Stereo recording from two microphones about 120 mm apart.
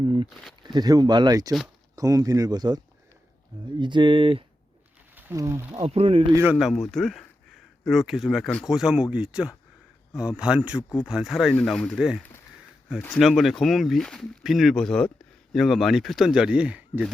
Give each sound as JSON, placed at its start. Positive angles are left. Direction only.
{"t": 0.0, "sound": "speech", "side_deg": -40}
{"t": 5.1, "sound": "a sound", "side_deg": -25}
{"t": 5.8, "sound": "speech", "side_deg": -55}
{"t": 6.4, "sound": "speech", "side_deg": -10}
{"t": 6.7, "sound": "speech", "side_deg": 0}
{"t": 13.1, "sound": "speech", "side_deg": 0}